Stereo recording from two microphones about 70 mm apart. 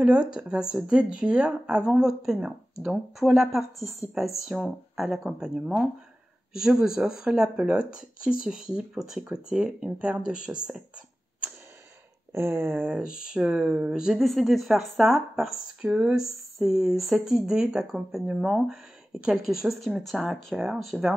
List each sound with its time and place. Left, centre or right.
0.0 s speech: centre
4.9 s speech: centre
6.6 s speech: centre
12.3 s speech: right
12.8 s speech: centre